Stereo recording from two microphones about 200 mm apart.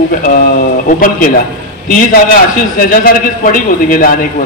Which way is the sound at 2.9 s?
45° left (ahead or behind).